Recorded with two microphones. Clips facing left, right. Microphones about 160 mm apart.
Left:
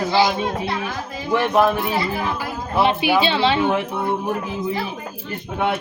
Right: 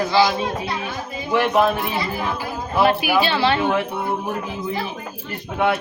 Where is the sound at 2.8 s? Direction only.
25° left (ahead or behind).